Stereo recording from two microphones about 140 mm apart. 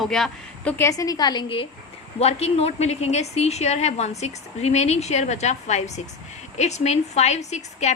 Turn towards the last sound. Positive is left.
turn(degrees=55)  # may be behind; listen again after turning